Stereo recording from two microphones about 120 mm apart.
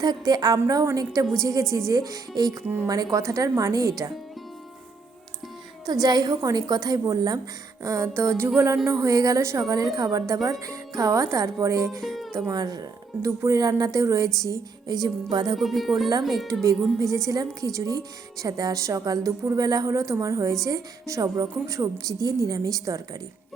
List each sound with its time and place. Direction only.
0.0 s a woman's voice: 35° right (ahead or behind)
2.6 s a woman's voice: 20° right (ahead or behind)
2.9 s a woman's voice: 30° right (ahead or behind)
5.8 s a woman's voice: 35° right (ahead or behind)
11.9 s speech: centre (ahead or behind)
12.3 s a woman's voice: 25° right (ahead or behind)
15.5 s speech: centre (ahead or behind)
17.2 s a woman's voice: 30° right (ahead or behind)